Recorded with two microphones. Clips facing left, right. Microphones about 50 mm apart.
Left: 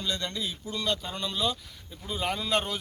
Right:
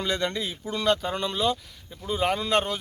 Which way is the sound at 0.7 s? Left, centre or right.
Right.